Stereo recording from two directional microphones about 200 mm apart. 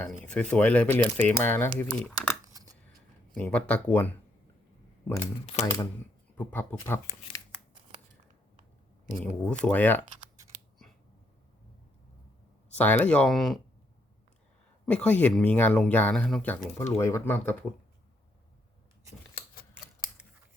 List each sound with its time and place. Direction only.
0.3 s speech: 5° left (ahead or behind)
2.5 s coin: 15° right (ahead or behind)
3.3 s speech: 5° left (ahead or behind)
5.5 s speech: 25° left (ahead or behind)
6.3 s speech: 10° left (ahead or behind)
9.1 s speech: 5° left (ahead or behind)
12.7 s speech: 10° left (ahead or behind)
14.8 s speech: 5° left (ahead or behind)